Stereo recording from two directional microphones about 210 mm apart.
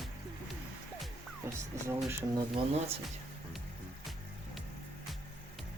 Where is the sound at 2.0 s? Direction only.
20° right (ahead or behind).